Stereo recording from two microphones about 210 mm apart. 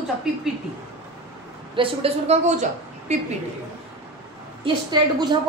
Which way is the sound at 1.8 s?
25° right (ahead or behind).